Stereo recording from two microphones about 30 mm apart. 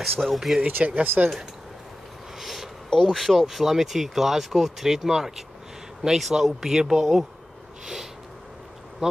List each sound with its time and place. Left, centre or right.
0.0 s speech: centre
0.6 s speech: right
1.0 s speech: right
2.3 s a sound: centre
3.1 s speech: centre
7.8 s a sound: centre
9.0 s speech: centre